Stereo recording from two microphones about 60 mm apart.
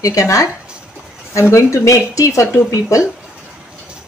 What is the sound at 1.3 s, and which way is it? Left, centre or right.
Speech, left.